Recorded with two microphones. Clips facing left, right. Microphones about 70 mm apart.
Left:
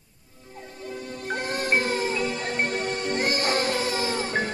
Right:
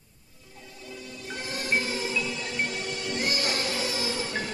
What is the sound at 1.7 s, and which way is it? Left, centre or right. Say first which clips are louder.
Music: left 4 dB; left.